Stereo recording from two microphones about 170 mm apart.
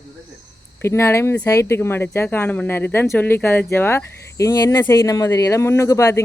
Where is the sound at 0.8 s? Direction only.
15° left (ahead or behind).